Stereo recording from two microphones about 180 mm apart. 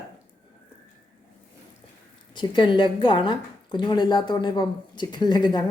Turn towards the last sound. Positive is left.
turn(degrees=25)  # may be behind; listen again after turning